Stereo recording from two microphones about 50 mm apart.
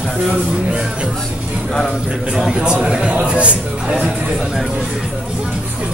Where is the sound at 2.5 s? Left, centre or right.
Right.